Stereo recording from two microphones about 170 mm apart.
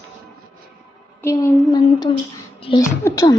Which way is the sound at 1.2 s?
15° left (ahead or behind).